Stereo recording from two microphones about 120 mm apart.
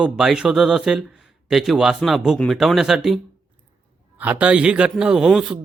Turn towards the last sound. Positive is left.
turn(degrees=-5)  # may be behind; listen again after turning